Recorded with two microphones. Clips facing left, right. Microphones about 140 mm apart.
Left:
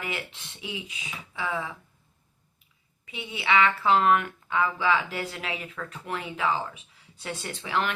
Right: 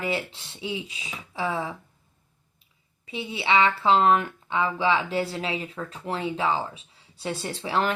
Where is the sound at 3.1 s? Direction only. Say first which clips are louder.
Right 2 dB; 30° right (ahead or behind).